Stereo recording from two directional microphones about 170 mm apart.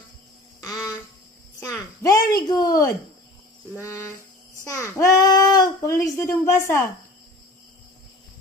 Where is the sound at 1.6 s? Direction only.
20° left (ahead or behind).